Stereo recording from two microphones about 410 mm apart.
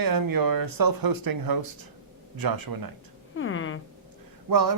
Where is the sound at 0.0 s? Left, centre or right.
Right.